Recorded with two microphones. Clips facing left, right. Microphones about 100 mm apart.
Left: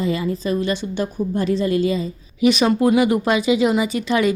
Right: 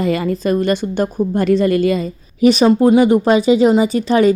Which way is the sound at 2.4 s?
35° right (ahead or behind).